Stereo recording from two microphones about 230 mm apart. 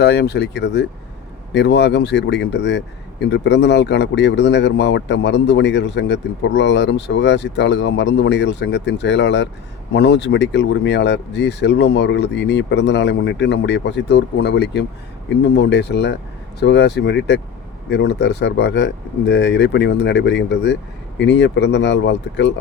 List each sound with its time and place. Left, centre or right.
0.0 s speech: left